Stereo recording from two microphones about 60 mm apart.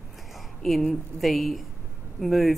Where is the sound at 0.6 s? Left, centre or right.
Centre.